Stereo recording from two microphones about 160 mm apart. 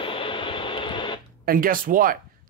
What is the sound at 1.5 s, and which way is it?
Speech, 60° right (ahead or behind).